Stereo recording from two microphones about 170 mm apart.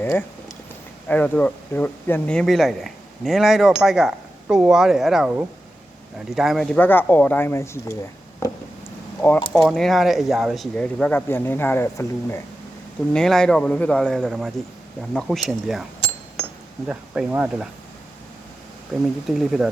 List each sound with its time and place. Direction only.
0.0 s speech: 10° left (ahead or behind)
8.4 s a sound: 20° left (ahead or behind)
9.5 s speech: centre (ahead or behind)
13.1 s speech: 5° left (ahead or behind)
18.9 s speech: centre (ahead or behind)